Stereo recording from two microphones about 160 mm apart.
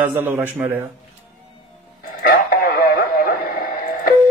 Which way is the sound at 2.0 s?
65° left (ahead or behind).